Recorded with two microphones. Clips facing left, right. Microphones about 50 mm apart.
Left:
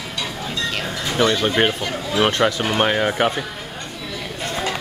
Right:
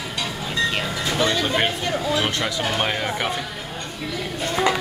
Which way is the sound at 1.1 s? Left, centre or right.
Left.